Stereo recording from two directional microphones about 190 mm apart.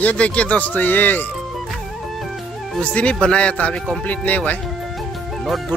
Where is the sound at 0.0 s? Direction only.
5° left (ahead or behind).